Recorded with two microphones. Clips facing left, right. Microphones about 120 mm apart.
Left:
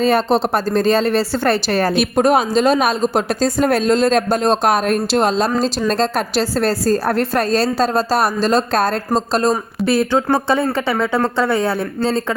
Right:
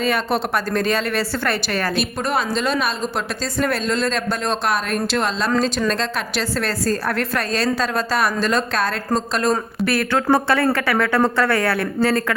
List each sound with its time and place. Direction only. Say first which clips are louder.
0.0 s a woman's voice: left 6 dB; 30° left (ahead or behind)
2.0 s a woman's voice: left 8 dB; 50° left (ahead or behind); by 11.9 s 20° left (ahead or behind)